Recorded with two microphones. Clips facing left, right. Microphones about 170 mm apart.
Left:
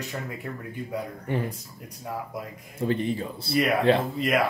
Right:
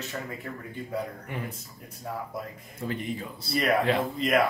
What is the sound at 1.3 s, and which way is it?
Speech, 30° left (ahead or behind).